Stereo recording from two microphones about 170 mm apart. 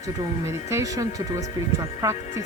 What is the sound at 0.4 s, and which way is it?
Music, 15° right (ahead or behind).